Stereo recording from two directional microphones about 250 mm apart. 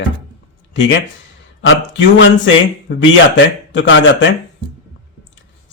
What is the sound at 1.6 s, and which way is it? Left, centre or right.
Speech, left.